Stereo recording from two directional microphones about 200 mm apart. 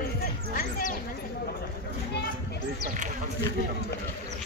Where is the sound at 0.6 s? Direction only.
45° left (ahead or behind).